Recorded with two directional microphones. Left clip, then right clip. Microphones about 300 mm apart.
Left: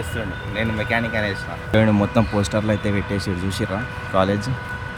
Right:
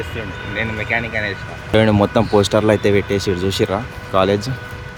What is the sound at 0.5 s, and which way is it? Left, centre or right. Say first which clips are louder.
Speech: right 2 dB; centre.